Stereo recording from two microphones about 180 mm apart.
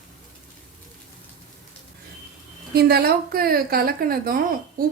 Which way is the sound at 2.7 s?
60° right (ahead or behind).